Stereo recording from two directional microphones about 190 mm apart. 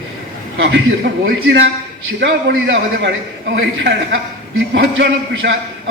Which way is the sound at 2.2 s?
80° right.